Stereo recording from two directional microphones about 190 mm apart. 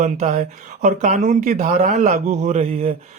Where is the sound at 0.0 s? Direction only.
40° right (ahead or behind).